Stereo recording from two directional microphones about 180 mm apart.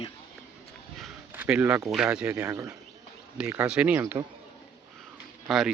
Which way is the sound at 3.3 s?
5° right (ahead or behind).